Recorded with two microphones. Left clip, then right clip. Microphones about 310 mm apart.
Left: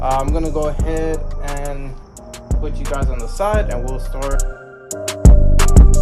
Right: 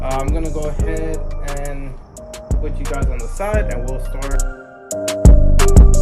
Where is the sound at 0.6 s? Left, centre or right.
Centre.